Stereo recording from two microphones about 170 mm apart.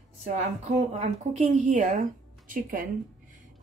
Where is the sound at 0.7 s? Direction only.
40° right (ahead or behind).